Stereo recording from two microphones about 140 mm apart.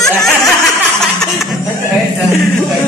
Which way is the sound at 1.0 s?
Centre (ahead or behind).